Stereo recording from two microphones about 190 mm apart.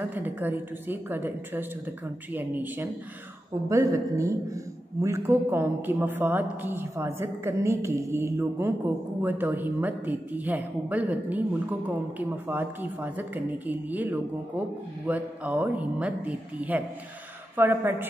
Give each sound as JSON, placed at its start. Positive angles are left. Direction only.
{"t": 0.0, "sound": "a man's voice", "side_deg": -10}